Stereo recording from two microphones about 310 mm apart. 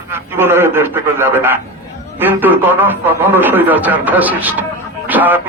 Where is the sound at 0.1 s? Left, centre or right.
Centre.